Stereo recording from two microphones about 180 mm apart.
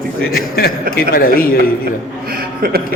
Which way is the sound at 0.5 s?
60° left (ahead or behind).